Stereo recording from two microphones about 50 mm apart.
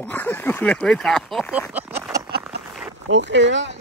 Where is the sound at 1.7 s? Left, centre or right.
Right.